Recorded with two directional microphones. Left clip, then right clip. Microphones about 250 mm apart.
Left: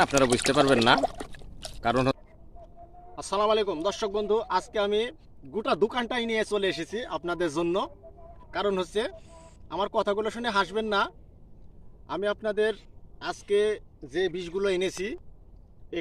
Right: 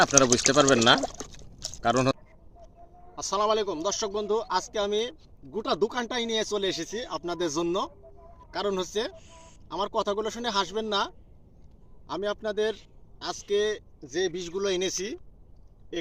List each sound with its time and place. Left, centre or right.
0.1 s speech: right
1.0 s pour: centre
1.8 s speech: right
3.2 s speech: centre